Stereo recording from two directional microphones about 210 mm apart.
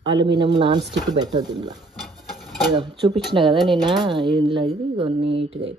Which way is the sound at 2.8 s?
25° right (ahead or behind).